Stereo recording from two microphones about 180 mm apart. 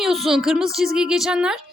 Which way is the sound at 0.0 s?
Centre (ahead or behind).